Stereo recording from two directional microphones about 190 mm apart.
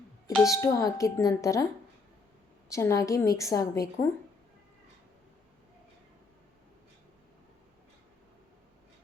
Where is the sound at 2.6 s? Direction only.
15° left (ahead or behind).